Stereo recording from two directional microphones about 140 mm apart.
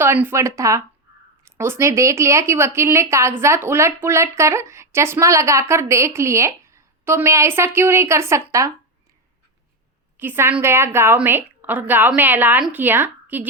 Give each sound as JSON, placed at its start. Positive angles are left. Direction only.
{"t": 0.0, "sound": "a woman's voice", "side_deg": -15}
{"t": 10.2, "sound": "a woman's voice", "side_deg": -15}